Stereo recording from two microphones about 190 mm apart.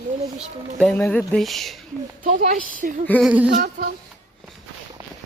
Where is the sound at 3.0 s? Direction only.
5° left (ahead or behind).